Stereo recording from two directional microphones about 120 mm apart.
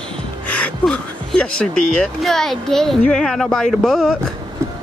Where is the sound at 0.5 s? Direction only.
10° left (ahead or behind).